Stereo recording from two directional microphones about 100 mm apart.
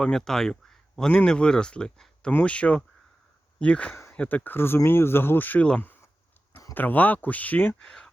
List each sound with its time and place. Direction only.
0.0 s speech: 5° left (ahead or behind)
7.8 s speech: 5° left (ahead or behind)